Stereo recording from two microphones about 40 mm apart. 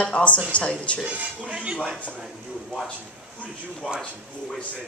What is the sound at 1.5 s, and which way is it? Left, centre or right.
Speech, right.